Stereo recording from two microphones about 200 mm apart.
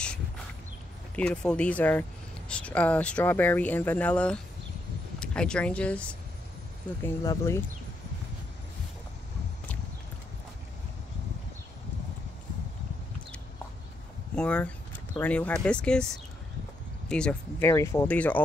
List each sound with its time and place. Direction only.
1.1 s speech: 5° left (ahead or behind)
14.3 s speech: 5° left (ahead or behind)